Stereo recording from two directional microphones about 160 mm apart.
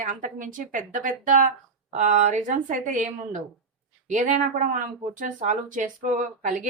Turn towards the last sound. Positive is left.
turn(degrees=-50)  # may be behind; listen again after turning